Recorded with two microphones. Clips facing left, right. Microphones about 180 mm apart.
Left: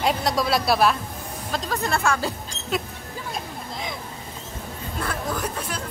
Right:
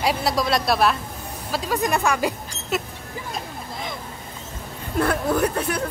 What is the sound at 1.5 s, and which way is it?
Speech, 10° right (ahead or behind).